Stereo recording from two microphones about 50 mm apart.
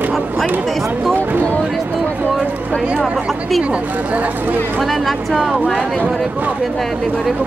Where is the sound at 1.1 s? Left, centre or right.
Right.